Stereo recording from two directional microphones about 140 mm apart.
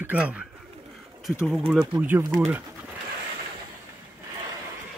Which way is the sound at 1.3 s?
Centre (ahead or behind).